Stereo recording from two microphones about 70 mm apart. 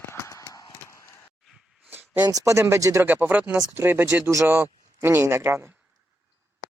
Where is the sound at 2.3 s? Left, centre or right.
Right.